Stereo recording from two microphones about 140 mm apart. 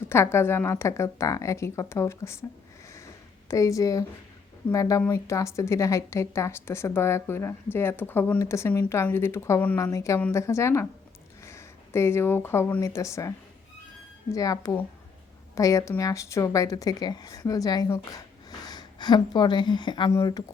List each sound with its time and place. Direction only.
0.1 s a woman's voice: 20° left (ahead or behind)
3.5 s a woman's voice: 25° left (ahead or behind)
18.6 s a woman's voice: 30° left (ahead or behind)